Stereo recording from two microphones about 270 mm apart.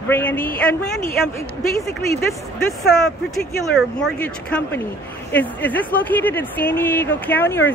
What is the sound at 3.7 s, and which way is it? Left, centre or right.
Speech, centre.